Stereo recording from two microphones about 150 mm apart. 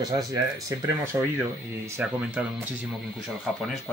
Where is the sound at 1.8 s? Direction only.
15° right (ahead or behind).